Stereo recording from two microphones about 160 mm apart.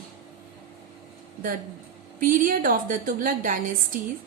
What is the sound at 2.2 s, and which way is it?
A woman's voice, 60° right (ahead or behind).